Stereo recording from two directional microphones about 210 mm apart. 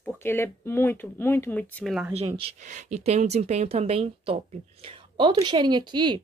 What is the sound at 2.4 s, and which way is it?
Speech, 35° right (ahead or behind).